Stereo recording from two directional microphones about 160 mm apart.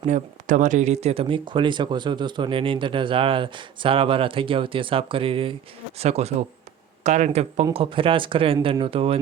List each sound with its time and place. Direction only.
0.0 s speech: 50° right (ahead or behind)